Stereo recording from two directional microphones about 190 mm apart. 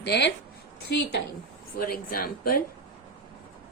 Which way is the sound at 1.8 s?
50° left (ahead or behind).